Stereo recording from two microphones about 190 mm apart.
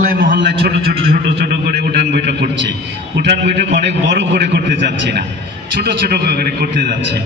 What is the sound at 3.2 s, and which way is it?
A man's voice, 65° right (ahead or behind).